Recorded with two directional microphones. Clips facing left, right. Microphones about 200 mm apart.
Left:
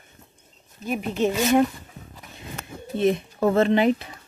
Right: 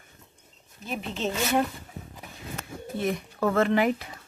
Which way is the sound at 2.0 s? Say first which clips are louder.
Right 2 dB; 35° right (ahead or behind).